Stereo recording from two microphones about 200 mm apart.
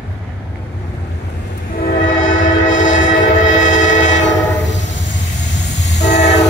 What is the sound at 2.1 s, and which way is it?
Train, 75° left (ahead or behind).